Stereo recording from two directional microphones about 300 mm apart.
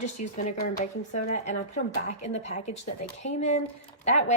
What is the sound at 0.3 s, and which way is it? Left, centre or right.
A woman's voice, left.